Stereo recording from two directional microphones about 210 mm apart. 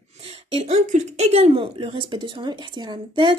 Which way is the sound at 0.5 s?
30° right (ahead or behind).